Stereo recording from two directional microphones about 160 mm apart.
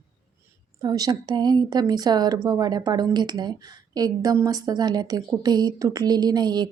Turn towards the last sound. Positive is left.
turn(degrees=-25)  # may be behind; listen again after turning